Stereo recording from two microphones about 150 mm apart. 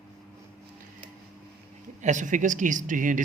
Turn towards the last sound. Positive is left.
turn(degrees=-60)  # may be behind; listen again after turning